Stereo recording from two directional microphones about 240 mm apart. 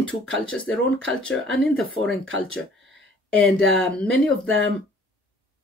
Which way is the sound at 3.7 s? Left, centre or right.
Centre.